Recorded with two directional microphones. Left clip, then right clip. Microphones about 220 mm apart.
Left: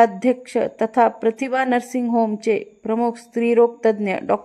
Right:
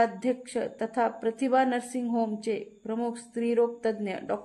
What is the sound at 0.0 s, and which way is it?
A woman's voice, 30° left (ahead or behind).